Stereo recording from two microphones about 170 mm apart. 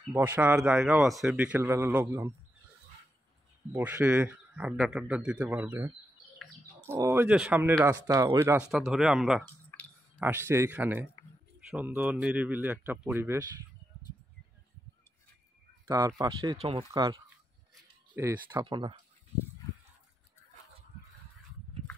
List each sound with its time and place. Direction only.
0.1 s a man's voice: 10° right (ahead or behind)
3.7 s a man's voice: 10° right (ahead or behind)
6.9 s a man's voice: 15° right (ahead or behind)
8.6 s speech: 5° right (ahead or behind)
9.7 s clicking: 10° left (ahead or behind)
10.1 s a man's voice: 15° right (ahead or behind)
16.2 s speech: 20° right (ahead or behind)
16.5 s speech: 30° right (ahead or behind)
18.1 s a man's voice: 15° right (ahead or behind)
18.7 s speech: 30° right (ahead or behind)